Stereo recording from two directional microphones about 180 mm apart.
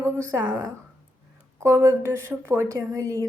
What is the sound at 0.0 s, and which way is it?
Speech, 10° right (ahead or behind).